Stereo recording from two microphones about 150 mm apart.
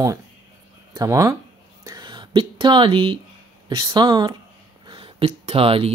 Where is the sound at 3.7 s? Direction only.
30° right (ahead or behind).